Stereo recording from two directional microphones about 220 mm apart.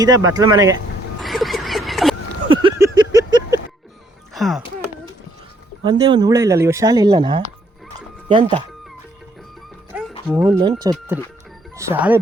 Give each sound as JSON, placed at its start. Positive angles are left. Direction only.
{"t": 0.3, "sound": "speech", "side_deg": -15}
{"t": 1.2, "sound": "a sound", "side_deg": 0}
{"t": 2.5, "sound": "vehicle", "side_deg": -20}
{"t": 4.4, "sound": "speech", "side_deg": 0}
{"t": 5.8, "sound": "speech", "side_deg": -20}
{"t": 7.9, "sound": "music", "side_deg": -20}
{"t": 10.2, "sound": "speech", "side_deg": -10}
{"t": 10.6, "sound": "speech", "side_deg": -20}